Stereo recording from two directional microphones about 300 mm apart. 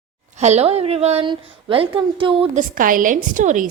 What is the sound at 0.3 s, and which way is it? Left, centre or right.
A woman's voice, right.